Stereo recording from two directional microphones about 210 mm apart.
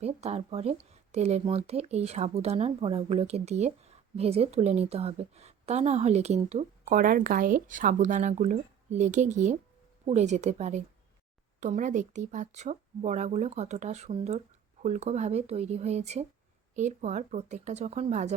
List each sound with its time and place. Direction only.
0.0 s a woman's voice: 30° right (ahead or behind)